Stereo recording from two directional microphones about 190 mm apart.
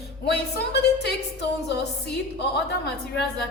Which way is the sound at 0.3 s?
60° left (ahead or behind).